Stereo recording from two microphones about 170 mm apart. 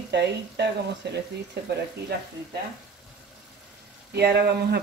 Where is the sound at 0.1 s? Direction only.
80° right.